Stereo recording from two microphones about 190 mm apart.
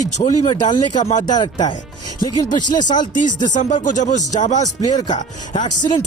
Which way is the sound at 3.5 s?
40° left (ahead or behind).